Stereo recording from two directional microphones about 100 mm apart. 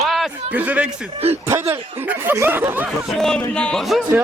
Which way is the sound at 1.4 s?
25° right (ahead or behind).